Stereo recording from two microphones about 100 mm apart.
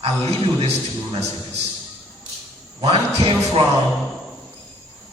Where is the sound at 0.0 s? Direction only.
80° right.